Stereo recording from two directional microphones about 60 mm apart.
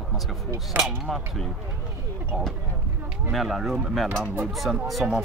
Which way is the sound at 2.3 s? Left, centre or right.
Centre.